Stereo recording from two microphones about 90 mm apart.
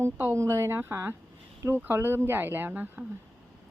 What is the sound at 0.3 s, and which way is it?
Speech, 30° right (ahead or behind).